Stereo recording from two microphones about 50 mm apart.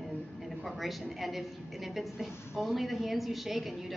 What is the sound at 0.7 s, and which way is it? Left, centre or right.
A woman's voice, centre.